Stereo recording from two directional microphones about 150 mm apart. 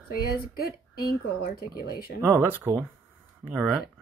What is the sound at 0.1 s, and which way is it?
Speech, 80° left.